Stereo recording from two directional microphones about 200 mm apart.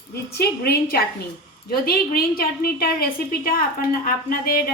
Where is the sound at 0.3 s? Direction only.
50° left (ahead or behind).